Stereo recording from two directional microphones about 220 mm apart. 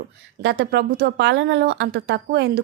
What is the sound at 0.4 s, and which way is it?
A woman's voice, 50° right (ahead or behind).